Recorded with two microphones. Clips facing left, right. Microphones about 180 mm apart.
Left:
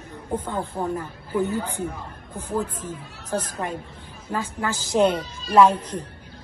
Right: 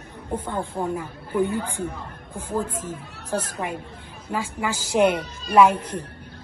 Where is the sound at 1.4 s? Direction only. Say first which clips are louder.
Right 1 dB; 55° right (ahead or behind).